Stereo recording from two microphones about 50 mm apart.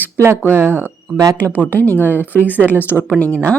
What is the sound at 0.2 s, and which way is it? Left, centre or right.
Speech, right.